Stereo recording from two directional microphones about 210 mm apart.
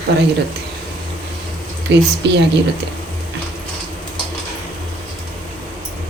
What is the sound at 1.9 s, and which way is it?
Speech, 55° right (ahead or behind).